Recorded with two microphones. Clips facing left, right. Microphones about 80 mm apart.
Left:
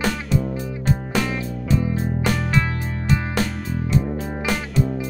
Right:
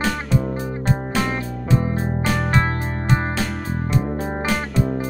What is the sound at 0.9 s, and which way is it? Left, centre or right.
Music, right.